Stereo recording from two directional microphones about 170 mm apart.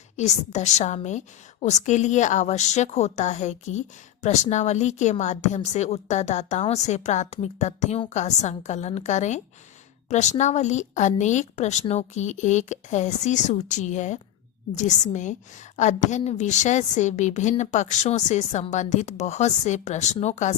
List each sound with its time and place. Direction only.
0.2 s a woman's voice: 40° left (ahead or behind)